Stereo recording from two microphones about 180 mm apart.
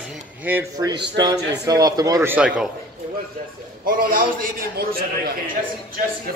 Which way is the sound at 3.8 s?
50° right (ahead or behind).